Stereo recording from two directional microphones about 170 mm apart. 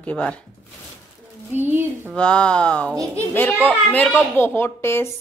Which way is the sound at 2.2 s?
5° left (ahead or behind).